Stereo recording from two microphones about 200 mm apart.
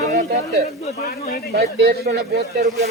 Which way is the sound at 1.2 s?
50° left (ahead or behind).